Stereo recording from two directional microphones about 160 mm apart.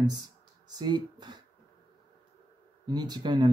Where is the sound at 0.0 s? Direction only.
25° right (ahead or behind).